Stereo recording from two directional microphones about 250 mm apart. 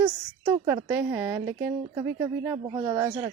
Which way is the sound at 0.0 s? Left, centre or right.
Centre.